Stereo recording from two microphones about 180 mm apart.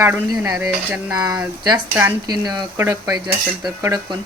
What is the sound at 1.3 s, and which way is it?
Speech, 20° right (ahead or behind).